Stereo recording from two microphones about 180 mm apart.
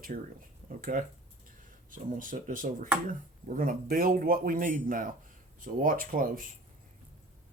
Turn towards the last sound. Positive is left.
turn(degrees=-50)  # may be behind; listen again after turning